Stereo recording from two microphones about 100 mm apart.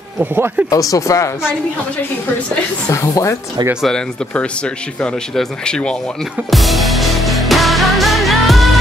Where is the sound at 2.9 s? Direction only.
30° left (ahead or behind).